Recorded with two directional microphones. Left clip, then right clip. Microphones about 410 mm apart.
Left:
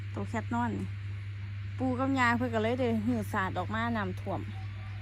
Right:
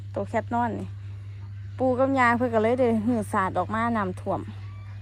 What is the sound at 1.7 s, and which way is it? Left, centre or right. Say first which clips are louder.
Speech: right 10 dB; right.